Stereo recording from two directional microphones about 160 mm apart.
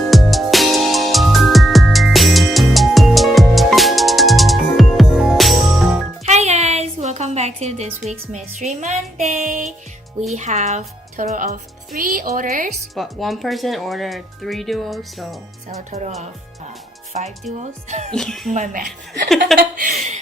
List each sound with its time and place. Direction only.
0.1 s music: centre (ahead or behind)
6.2 s music: 45° right (ahead or behind)
10.3 s speech: 45° right (ahead or behind)
13.0 s speech: centre (ahead or behind)
15.9 s music: 45° right (ahead or behind)
17.1 s music: 50° right (ahead or behind)
18.1 s speech: 5° left (ahead or behind)
18.5 s music: 55° right (ahead or behind)
19.5 s speech: 55° right (ahead or behind)